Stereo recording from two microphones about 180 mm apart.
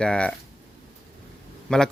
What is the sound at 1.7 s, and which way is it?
Speech, 5° left (ahead or behind).